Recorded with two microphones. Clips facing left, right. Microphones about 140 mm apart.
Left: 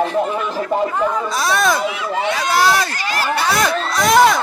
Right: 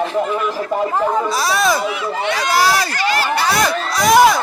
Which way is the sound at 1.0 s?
30° right (ahead or behind).